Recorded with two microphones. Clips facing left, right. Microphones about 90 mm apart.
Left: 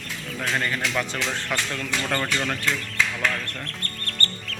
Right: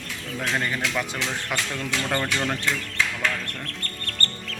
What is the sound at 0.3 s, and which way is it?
Speech, centre (ahead or behind).